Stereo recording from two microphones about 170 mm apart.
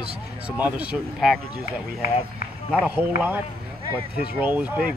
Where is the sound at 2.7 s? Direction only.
10° right (ahead or behind).